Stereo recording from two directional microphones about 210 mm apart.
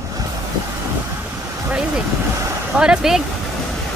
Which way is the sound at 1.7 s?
5° right (ahead or behind).